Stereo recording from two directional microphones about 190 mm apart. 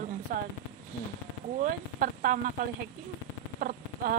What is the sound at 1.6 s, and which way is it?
Speech, 45° right (ahead or behind).